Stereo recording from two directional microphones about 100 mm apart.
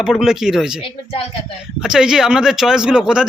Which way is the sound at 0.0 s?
5° right (ahead or behind).